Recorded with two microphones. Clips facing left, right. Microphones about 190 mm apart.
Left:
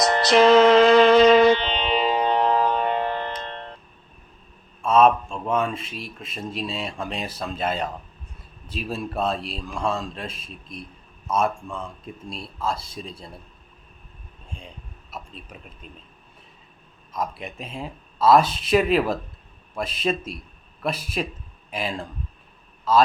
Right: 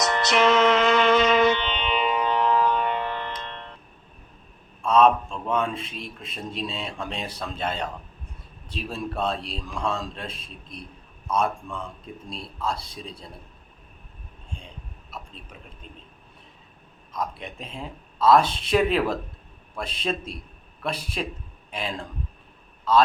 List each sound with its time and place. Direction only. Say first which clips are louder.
0.0 s music: left 5 dB; 35° left (ahead or behind)
4.8 s a man's voice: left 1 dB; 5° left (ahead or behind)
17.1 s a man's voice: left 2 dB; 5° left (ahead or behind)